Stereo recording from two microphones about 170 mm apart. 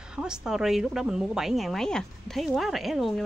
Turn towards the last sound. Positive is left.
turn(degrees=0)  # may be behind; listen again after turning